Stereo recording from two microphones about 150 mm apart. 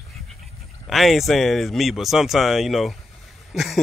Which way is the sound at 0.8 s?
Centre (ahead or behind).